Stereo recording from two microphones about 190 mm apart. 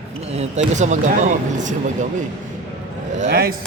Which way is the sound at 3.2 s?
55° right (ahead or behind).